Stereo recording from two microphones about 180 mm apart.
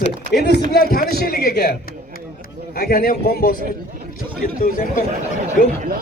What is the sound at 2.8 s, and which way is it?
Speech, 55° left (ahead or behind).